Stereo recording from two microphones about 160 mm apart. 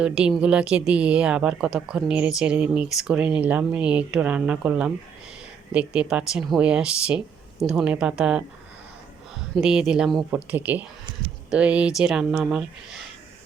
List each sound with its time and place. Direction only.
0.0 s a woman's voice: 5° right (ahead or behind)
9.6 s a woman's voice: 5° right (ahead or behind)